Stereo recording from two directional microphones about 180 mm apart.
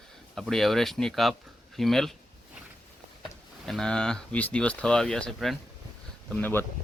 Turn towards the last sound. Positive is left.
turn(degrees=10)  # may be behind; listen again after turning